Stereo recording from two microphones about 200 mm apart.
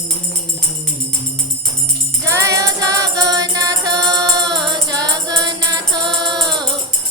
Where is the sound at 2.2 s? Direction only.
15° right (ahead or behind).